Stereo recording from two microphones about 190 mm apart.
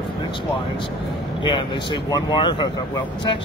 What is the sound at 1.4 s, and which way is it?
Speech, 25° left (ahead or behind).